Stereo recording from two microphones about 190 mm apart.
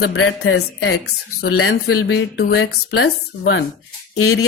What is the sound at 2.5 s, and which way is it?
Speech, 75° left (ahead or behind).